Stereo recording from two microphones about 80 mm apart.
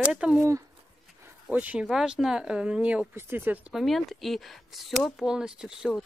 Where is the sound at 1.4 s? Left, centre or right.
Centre.